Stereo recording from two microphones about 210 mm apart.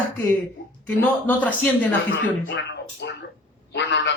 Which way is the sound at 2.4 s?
55° left (ahead or behind).